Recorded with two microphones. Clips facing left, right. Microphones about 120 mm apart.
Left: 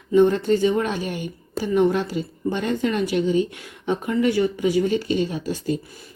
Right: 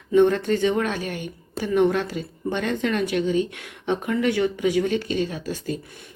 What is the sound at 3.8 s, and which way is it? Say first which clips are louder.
Speech: left 1 dB; 5° left (ahead or behind).